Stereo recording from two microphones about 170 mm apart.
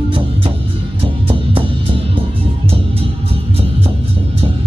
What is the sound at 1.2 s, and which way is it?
Music, 30° right (ahead or behind).